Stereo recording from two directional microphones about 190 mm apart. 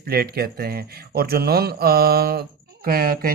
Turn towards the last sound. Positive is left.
turn(degrees=-50)  # may be behind; listen again after turning